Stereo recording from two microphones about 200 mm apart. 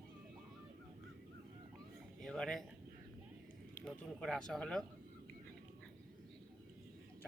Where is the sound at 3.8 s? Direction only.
5° left (ahead or behind).